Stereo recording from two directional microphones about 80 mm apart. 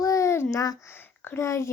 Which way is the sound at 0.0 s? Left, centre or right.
Left.